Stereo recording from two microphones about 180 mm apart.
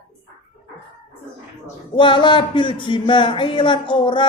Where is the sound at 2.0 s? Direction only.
25° left (ahead or behind).